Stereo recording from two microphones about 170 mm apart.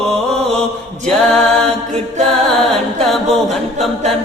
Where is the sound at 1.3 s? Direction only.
5° left (ahead or behind).